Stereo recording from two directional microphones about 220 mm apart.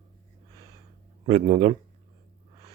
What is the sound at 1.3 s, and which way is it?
Speech, 25° right (ahead or behind).